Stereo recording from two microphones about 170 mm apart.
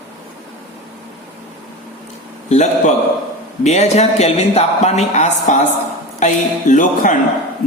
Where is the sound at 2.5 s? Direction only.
40° left (ahead or behind).